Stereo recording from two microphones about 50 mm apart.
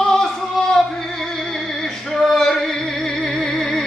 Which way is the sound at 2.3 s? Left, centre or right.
Centre.